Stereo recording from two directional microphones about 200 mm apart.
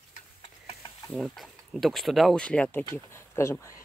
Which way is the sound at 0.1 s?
30° left (ahead or behind).